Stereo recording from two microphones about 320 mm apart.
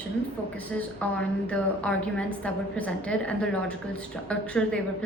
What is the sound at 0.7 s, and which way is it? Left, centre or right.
A woman's voice, centre.